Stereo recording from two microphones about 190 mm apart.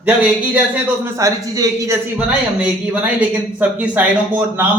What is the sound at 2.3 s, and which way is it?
Speech, 5° right (ahead or behind).